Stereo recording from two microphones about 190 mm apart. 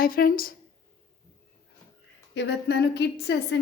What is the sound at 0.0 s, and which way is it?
Speech, 50° left (ahead or behind).